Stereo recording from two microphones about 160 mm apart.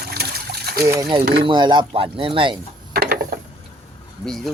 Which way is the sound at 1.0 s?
30° right (ahead or behind).